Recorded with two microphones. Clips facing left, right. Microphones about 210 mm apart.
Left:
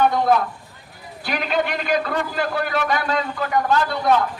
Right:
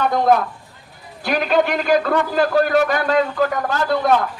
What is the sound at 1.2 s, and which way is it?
A man's voice, 45° right (ahead or behind).